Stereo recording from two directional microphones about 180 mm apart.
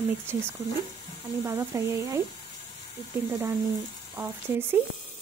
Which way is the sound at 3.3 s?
10° right (ahead or behind).